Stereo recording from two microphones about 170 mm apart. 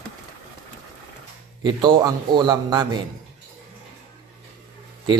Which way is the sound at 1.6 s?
30° right (ahead or behind).